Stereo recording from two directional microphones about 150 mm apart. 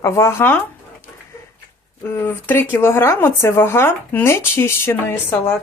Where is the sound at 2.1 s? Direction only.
15° left (ahead or behind).